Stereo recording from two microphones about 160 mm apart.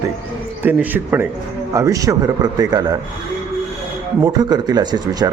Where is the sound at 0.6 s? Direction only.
10° right (ahead or behind).